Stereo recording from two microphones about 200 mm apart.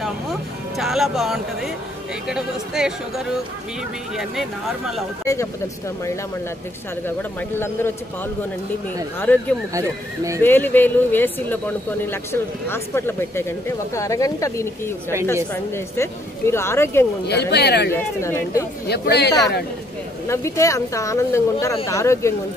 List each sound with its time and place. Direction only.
0.0 s music: centre (ahead or behind)
2.2 s speech: 5° right (ahead or behind)
5.2 s speech: 15° left (ahead or behind)
7.1 s speech: 10° left (ahead or behind)
9.2 s speech: 10° left (ahead or behind)
9.8 s speech: 15° right (ahead or behind)
10.4 s speech: 10° left (ahead or behind)
17.3 s speech: 55° left (ahead or behind)
18.2 s speech: 15° left (ahead or behind)
18.9 s speech: 55° left (ahead or behind)
20.2 s speech: 15° left (ahead or behind)